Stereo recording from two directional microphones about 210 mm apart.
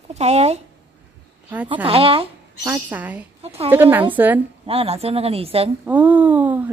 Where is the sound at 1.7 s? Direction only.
25° right (ahead or behind).